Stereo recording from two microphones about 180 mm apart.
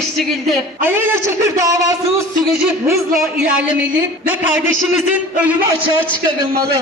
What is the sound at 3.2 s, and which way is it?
A man's voice, 5° right (ahead or behind).